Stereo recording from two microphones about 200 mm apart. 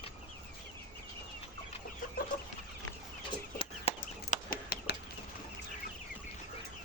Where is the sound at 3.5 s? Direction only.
30° left (ahead or behind).